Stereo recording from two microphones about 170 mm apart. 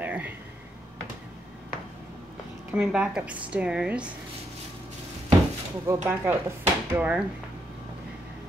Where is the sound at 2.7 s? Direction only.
5° right (ahead or behind).